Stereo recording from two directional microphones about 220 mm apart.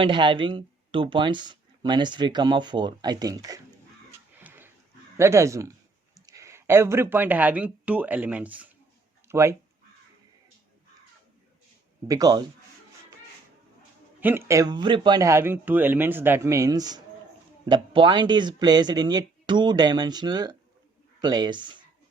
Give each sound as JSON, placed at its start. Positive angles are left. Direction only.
{"t": 0.0, "sound": "speech", "side_deg": -20}
{"t": 4.4, "sound": "dog", "side_deg": -10}
{"t": 5.1, "sound": "a man's voice", "side_deg": -10}
{"t": 12.0, "sound": "a man's voice", "side_deg": -15}
{"t": 14.2, "sound": "a man's voice", "side_deg": -10}